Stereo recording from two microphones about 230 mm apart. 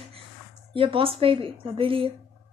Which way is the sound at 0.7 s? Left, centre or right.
Right.